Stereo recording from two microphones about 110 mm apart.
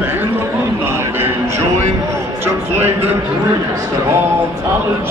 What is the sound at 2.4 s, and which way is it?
Speech, 20° right (ahead or behind).